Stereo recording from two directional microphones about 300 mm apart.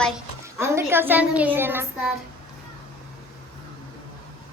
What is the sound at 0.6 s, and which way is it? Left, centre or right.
A woman's voice, centre.